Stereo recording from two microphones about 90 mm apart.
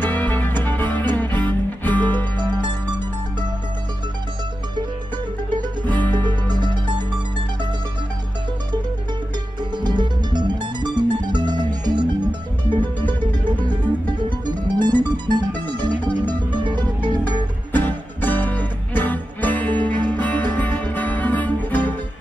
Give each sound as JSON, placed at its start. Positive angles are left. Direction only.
{"t": 0.0, "sound": "music", "side_deg": 20}
{"t": 2.3, "sound": "music", "side_deg": -55}
{"t": 5.9, "sound": "music", "side_deg": 20}
{"t": 6.1, "sound": "music", "side_deg": -55}
{"t": 9.6, "sound": "music", "side_deg": -55}
{"t": 13.7, "sound": "music", "side_deg": -55}
{"t": 17.7, "sound": "music", "side_deg": 20}